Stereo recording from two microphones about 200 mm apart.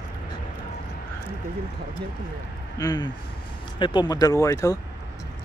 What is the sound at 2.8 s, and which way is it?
Speech, 20° left (ahead or behind).